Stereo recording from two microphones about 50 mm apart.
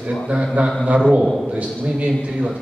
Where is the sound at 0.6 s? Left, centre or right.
Right.